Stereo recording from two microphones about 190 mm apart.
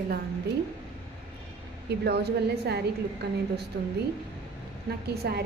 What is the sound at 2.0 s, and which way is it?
A woman's voice, 60° right (ahead or behind).